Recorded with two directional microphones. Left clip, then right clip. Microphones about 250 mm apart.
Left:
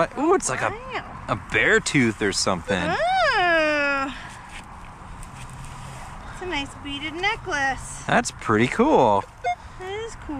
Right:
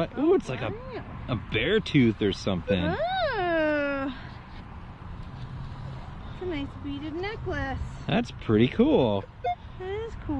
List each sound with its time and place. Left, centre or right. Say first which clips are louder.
0.0 s speech: left 4 dB; centre
2.9 s a sound: left 11 dB; centre
6.5 s speech: left 9 dB; centre
8.1 s speech: left 6 dB; centre
9.4 s vehicle: left 4 dB; centre